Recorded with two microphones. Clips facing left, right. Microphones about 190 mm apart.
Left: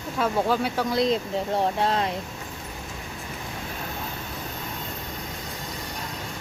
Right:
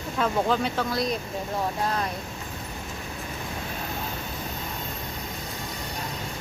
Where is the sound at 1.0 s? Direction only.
25° left (ahead or behind).